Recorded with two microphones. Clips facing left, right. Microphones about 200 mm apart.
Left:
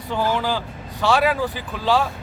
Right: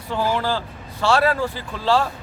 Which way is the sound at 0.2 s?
10° right (ahead or behind).